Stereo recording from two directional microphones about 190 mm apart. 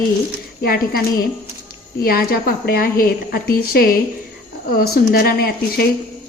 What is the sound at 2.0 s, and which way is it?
A woman's voice, 50° left (ahead or behind).